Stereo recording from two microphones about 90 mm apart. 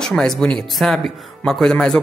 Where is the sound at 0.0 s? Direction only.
5° left (ahead or behind).